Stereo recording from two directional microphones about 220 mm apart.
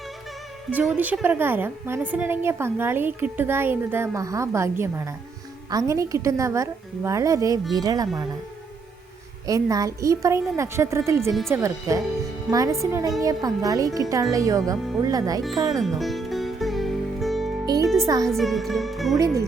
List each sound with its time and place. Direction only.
0.7 s a woman's voice: 10° right (ahead or behind)
9.5 s a woman's voice: 15° right (ahead or behind)
15.8 s music: centre (ahead or behind)
18.0 s a woman's voice: 15° right (ahead or behind)
18.3 s music: centre (ahead or behind)
19.1 s a woman's voice: 15° right (ahead or behind)